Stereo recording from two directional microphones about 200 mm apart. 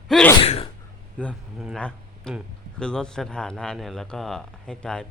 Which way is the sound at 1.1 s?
5° left (ahead or behind).